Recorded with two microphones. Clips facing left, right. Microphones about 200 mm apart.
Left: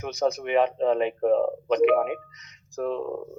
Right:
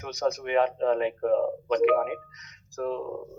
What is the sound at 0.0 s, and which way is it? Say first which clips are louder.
Speech: left 2 dB; 20° left (ahead or behind).